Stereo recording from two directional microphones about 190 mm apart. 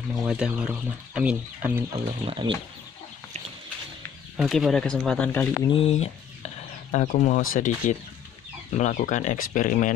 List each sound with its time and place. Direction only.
0.3 s speech: 5° right (ahead or behind)
2.0 s speech: 25° right (ahead or behind)
4.4 s speech: centre (ahead or behind)
5.7 s speech: 30° left (ahead or behind)